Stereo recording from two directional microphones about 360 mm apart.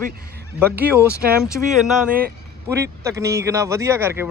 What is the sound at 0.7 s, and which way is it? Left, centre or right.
A man's voice, centre.